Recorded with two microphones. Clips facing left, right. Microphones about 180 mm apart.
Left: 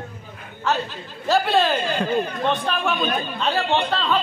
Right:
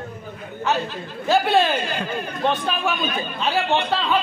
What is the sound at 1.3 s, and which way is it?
A man's voice, centre (ahead or behind).